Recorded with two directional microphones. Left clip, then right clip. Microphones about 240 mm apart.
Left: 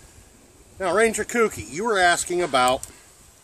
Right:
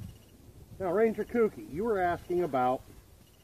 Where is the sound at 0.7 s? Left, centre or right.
Left.